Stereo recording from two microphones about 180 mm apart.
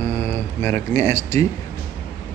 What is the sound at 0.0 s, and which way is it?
Speech, 15° left (ahead or behind).